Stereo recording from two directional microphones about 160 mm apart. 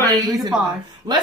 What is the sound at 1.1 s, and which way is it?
Speech, 25° right (ahead or behind).